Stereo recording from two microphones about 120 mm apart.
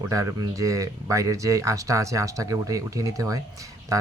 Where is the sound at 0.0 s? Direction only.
25° right (ahead or behind).